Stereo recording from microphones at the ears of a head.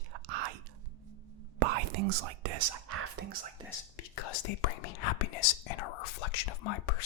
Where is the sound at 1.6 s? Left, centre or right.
Right.